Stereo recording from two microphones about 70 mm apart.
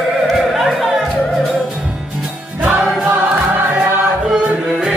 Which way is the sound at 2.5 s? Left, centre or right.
Right.